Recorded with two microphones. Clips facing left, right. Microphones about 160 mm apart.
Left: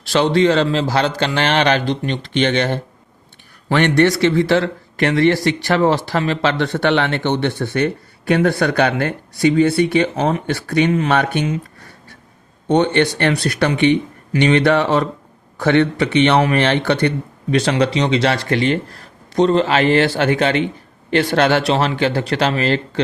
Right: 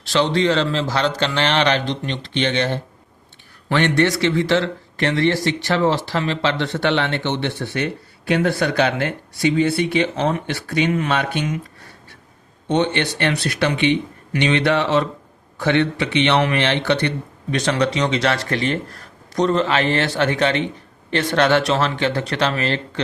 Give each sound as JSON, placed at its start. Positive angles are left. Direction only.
{"t": 0.1, "sound": "a man's voice", "side_deg": 40}
{"t": 3.8, "sound": "a man's voice", "side_deg": 50}
{"t": 12.7, "sound": "a man's voice", "side_deg": 45}
{"t": 17.7, "sound": "speech", "side_deg": 35}